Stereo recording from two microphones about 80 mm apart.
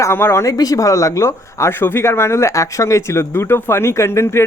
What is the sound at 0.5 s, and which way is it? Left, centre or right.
Speech, left.